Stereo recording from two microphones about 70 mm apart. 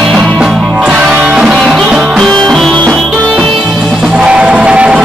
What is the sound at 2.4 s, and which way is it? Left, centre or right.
Music, centre.